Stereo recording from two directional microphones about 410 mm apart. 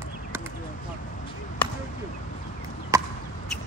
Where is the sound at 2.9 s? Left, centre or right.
Centre.